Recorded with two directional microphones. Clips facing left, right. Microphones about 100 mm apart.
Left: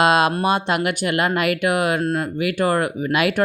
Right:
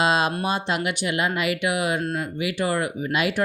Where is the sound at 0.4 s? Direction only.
60° left (ahead or behind).